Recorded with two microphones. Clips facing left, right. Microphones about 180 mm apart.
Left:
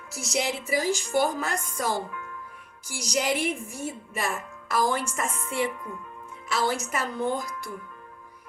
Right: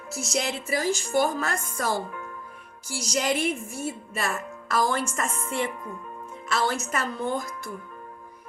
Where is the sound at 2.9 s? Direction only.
15° left (ahead or behind).